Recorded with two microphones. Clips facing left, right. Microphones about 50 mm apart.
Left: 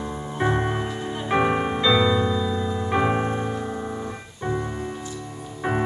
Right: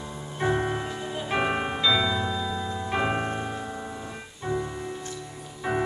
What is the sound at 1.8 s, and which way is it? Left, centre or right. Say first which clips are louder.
Music: left 6 dB; left.